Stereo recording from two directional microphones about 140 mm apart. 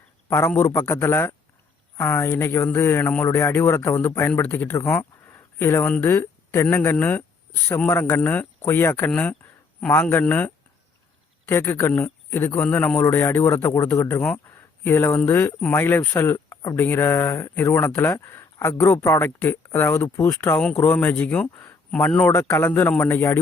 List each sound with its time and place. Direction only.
0.3 s speech: 20° left (ahead or behind)